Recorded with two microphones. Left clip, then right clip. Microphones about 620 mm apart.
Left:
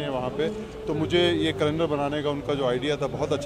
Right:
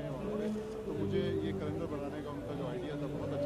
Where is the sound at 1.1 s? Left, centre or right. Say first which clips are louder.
Left 14 dB; left.